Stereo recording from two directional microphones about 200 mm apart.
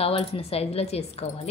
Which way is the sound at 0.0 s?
30° left (ahead or behind).